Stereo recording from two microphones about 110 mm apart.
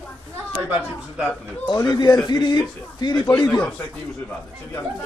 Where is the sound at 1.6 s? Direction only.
40° left (ahead or behind).